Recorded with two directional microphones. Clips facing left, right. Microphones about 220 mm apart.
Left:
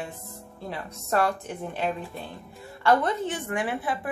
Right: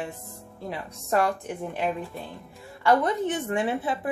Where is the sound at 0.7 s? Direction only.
15° right (ahead or behind).